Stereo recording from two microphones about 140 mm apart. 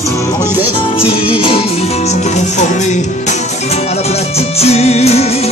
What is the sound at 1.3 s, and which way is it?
Music, 40° left (ahead or behind).